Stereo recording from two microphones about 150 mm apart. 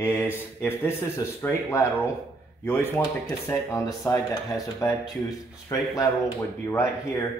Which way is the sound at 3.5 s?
15° left (ahead or behind).